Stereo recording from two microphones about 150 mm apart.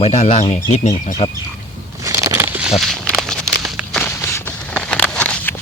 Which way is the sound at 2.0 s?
20° right (ahead or behind).